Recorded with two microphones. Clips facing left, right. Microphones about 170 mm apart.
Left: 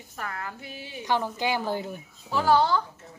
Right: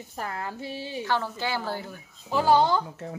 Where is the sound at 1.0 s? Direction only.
15° left (ahead or behind).